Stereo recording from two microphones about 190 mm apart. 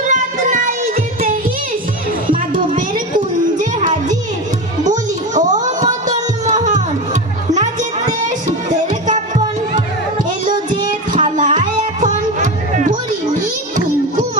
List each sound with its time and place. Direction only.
0.1 s music: 45° right (ahead or behind)
2.3 s children playing: 45° right (ahead or behind)
3.6 s music: 40° right (ahead or behind)
8.9 s music: 40° right (ahead or behind)